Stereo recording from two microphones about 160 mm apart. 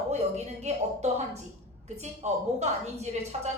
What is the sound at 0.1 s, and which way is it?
A woman's voice, 45° right (ahead or behind).